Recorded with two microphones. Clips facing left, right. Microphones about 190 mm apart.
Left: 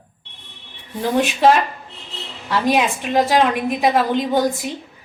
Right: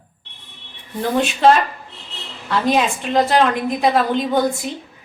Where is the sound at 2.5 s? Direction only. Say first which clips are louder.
Even; 10° left (ahead or behind).